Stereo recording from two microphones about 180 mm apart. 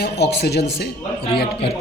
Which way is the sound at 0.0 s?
65° left (ahead or behind).